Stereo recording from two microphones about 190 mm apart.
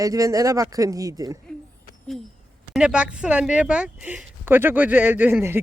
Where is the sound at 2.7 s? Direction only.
5° right (ahead or behind).